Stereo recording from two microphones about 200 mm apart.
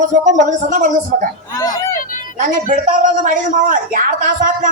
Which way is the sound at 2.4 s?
40° right (ahead or behind).